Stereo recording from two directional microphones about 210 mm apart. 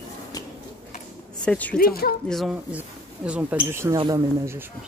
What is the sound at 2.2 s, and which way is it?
Speech, centre (ahead or behind).